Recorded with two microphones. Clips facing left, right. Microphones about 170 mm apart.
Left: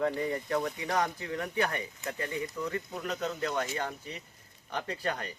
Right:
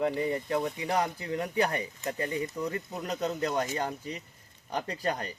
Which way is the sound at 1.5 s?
35° right (ahead or behind).